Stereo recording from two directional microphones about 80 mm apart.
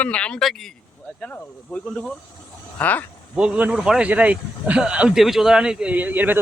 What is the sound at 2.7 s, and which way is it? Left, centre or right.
Speech, centre.